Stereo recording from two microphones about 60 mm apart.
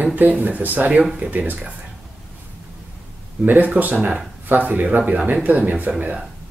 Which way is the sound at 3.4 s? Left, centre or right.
Right.